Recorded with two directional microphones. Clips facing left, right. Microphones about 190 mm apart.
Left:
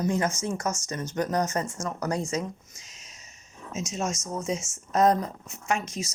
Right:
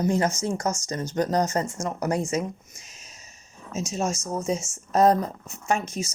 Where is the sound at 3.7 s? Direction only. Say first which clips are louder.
Right 3 dB; 30° right (ahead or behind).